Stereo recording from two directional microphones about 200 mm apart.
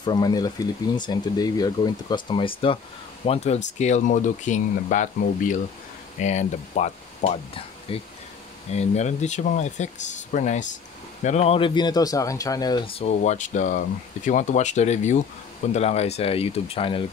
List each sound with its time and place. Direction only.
0.0 s speech: 20° left (ahead or behind)